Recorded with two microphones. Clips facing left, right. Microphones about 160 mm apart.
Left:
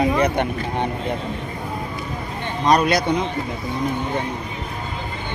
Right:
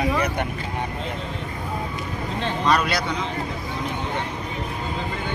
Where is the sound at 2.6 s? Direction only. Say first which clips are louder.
Left 5 dB; 40° left (ahead or behind).